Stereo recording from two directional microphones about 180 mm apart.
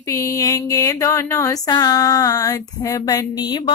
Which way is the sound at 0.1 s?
15° left (ahead or behind).